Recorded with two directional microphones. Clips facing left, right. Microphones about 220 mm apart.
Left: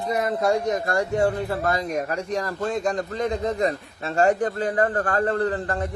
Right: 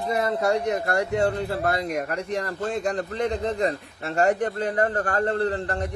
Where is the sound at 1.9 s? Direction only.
35° left (ahead or behind).